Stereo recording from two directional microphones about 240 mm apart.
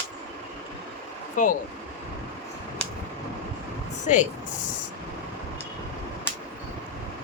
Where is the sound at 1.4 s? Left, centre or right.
Left.